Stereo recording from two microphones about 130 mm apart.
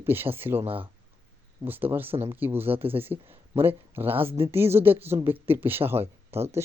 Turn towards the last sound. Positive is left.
turn(degrees=-20)  # may be behind; listen again after turning